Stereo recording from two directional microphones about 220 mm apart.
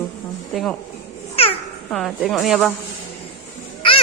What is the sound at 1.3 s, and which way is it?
Babbling, 25° left (ahead or behind).